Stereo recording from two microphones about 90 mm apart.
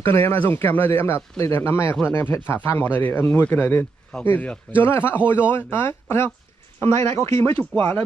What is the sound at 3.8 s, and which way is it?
A man's voice, 10° left (ahead or behind).